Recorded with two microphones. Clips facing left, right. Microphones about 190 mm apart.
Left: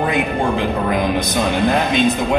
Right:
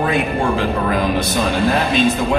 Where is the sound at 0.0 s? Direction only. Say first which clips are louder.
Even; 20° left (ahead or behind).